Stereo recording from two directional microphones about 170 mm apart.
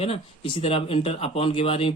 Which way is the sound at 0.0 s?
35° left (ahead or behind).